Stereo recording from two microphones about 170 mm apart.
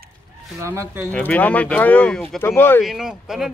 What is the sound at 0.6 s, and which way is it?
Speech, 15° right (ahead or behind).